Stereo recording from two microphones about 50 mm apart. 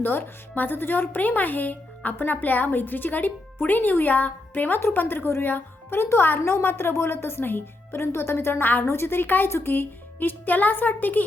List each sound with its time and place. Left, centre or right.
0.0 s speech: left
4.9 s a woman's voice: left
8.6 s speech: left
8.9 s a woman's voice: left